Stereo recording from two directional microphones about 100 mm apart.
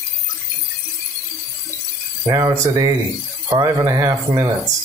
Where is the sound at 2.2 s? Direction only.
35° right (ahead or behind).